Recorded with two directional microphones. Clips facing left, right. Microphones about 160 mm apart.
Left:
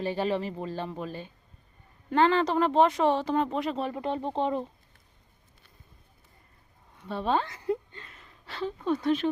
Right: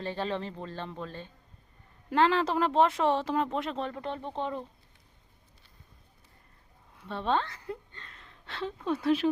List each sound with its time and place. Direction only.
0.0 s speech: 10° left (ahead or behind)
2.0 s speech: centre (ahead or behind); by 4.6 s 20° left (ahead or behind)
6.9 s a sound: centre (ahead or behind)